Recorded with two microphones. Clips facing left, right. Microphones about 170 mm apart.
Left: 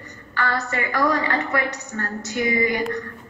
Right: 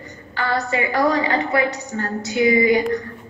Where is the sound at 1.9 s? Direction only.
25° right (ahead or behind).